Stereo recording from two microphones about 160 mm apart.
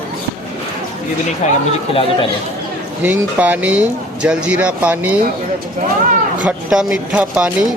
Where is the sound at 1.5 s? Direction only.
35° left (ahead or behind).